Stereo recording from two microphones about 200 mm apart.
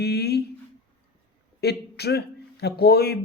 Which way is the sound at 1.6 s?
55° left (ahead or behind).